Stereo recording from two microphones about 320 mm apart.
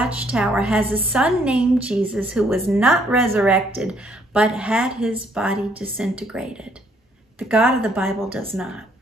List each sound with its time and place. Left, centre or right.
0.0 s a woman's voice: centre